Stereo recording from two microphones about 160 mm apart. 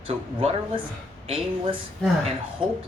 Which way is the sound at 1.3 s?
35° right (ahead or behind).